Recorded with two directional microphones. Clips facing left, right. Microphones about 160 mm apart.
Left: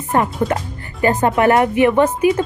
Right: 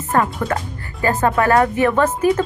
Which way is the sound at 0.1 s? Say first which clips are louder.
Left 1 dB; 20° left (ahead or behind).